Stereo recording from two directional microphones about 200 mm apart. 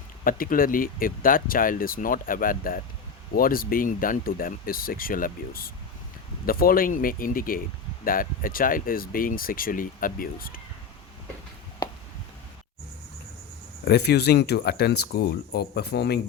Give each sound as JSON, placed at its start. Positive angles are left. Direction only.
{"t": 0.3, "sound": "speech", "side_deg": 45}
{"t": 13.8, "sound": "speech", "side_deg": 55}